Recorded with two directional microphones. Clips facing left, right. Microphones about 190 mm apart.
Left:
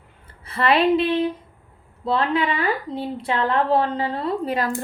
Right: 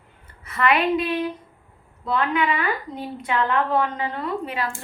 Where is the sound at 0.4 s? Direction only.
30° left (ahead or behind).